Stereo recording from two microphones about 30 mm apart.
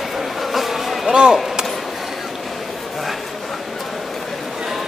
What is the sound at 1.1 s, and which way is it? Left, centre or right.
Chop, right.